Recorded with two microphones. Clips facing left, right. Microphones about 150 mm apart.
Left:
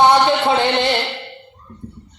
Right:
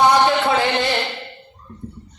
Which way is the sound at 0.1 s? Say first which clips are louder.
Left 2 dB; 25° left (ahead or behind).